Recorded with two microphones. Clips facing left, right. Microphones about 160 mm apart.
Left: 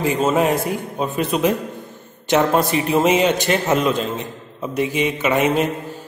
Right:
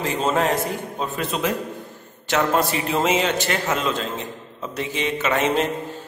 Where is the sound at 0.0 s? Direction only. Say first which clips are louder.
Left 4 dB; 10° left (ahead or behind).